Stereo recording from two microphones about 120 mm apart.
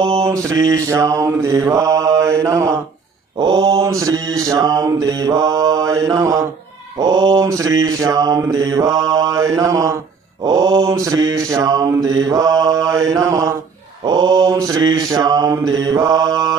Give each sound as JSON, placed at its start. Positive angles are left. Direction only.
{"t": 0.2, "sound": "mantra", "side_deg": -25}
{"t": 3.3, "sound": "mantra", "side_deg": -40}
{"t": 3.8, "sound": "mantra", "side_deg": -25}